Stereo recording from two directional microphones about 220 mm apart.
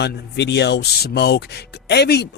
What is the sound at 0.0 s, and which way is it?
Speech, 50° left (ahead or behind).